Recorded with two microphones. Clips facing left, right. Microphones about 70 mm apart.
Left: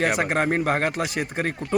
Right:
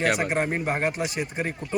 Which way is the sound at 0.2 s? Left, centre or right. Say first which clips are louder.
Left 3 dB; left.